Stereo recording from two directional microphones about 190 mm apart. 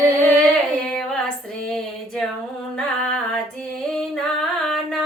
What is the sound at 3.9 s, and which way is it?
Music, centre (ahead or behind).